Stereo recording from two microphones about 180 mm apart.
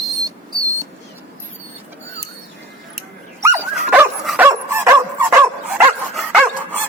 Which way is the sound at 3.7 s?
5° right (ahead or behind).